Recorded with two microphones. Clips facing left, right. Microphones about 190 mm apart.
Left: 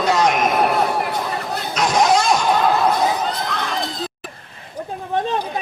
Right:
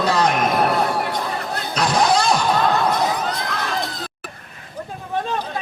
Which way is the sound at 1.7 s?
30° right (ahead or behind).